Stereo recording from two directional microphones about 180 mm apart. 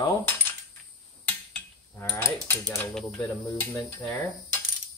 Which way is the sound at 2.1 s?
10° left (ahead or behind).